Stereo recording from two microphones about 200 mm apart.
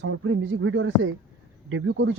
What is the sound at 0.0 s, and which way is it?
Speech, 85° right.